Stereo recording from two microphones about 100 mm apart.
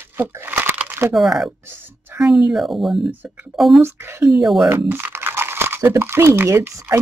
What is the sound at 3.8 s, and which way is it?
Speech, 25° right (ahead or behind).